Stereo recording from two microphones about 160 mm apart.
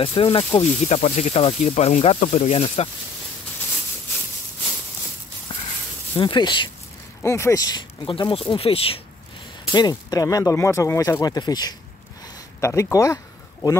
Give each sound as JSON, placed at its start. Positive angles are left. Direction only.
{"t": 0.0, "sound": "speech", "side_deg": 35}
{"t": 6.1, "sound": "speech", "side_deg": 30}
{"t": 7.2, "sound": "speech", "side_deg": 15}
{"t": 9.7, "sound": "speech", "side_deg": 25}